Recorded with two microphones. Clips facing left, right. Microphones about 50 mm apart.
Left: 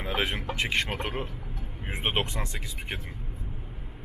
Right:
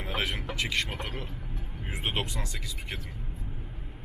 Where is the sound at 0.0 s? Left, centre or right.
Left.